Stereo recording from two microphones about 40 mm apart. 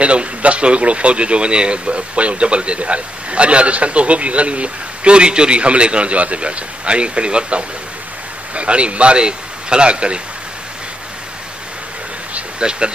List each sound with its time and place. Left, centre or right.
0.0 s speech: right
12.4 s insect: right